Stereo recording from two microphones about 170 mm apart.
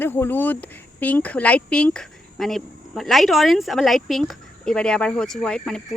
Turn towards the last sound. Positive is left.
turn(degrees=5)  # may be behind; listen again after turning